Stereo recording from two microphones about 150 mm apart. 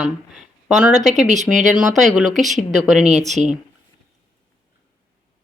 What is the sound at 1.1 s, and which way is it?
Speech, 55° right (ahead or behind).